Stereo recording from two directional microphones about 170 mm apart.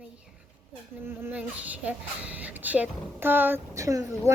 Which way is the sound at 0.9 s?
10° right (ahead or behind).